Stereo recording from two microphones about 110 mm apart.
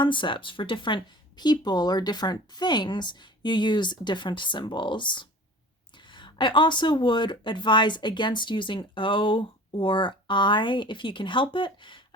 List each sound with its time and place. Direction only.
0.0 s speech: 45° left (ahead or behind)